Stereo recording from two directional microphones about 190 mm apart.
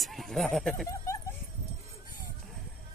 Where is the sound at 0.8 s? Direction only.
15° left (ahead or behind).